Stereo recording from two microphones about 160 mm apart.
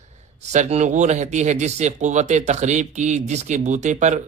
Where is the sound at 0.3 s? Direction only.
45° right (ahead or behind).